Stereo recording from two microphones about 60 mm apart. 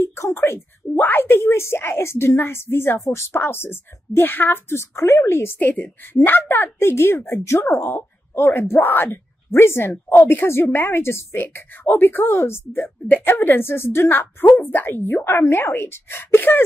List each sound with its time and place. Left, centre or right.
0.0 s a woman's voice: left
1.4 s a woman's voice: left
3.3 s a woman's voice: left